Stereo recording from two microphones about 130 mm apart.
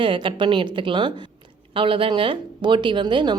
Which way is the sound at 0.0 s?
40° right (ahead or behind).